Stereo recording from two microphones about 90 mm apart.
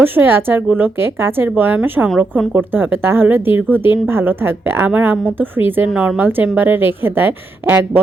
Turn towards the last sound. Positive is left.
turn(degrees=-20)  # may be behind; listen again after turning